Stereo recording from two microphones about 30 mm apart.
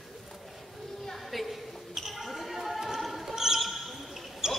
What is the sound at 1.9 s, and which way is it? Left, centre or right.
Basketball bounce, centre.